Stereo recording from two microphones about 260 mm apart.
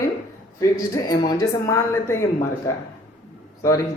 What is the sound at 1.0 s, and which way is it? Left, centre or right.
Speech, centre.